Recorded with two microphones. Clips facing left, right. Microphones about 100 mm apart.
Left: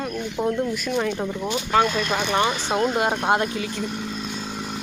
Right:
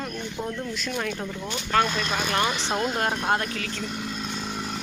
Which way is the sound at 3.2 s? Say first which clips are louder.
Left 4 dB; 20° left (ahead or behind).